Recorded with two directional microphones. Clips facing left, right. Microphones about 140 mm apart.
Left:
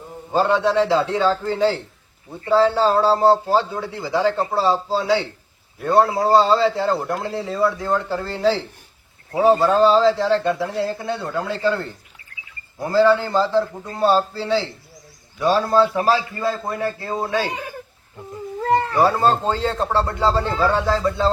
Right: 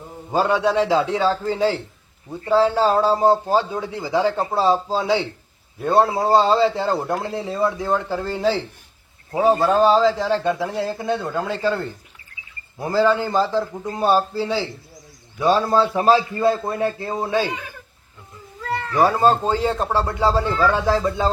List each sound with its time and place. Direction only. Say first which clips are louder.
0.3 s a man's voice: left 1 dB; 15° right (ahead or behind)
12.9 s a man's voice: left 2 dB; 15° right (ahead or behind)
18.6 s cat: left 8 dB; 35° left (ahead or behind)
19.0 s a man's voice: right 1 dB; 15° right (ahead or behind)